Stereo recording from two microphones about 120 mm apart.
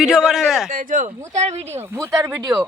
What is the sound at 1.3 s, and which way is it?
Speech, 70° right (ahead or behind).